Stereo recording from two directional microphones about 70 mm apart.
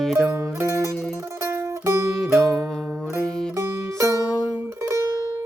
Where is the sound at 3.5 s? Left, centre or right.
Right.